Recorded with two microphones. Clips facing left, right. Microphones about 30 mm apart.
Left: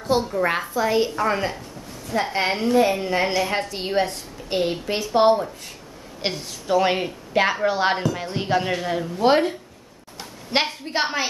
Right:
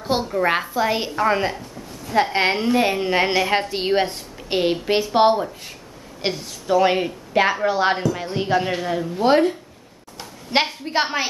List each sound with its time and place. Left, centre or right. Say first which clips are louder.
0.2 s a woman's voice: right 1 dB; centre
0.7 s a woman's voice: even; right
2.1 s a woman's voice: right 5 dB; right
2.5 s a woman's voice: even; right
2.8 s a woman's voice: right 1 dB; right; by 5.8 s centre
6.2 s a woman's voice: right 2 dB; centre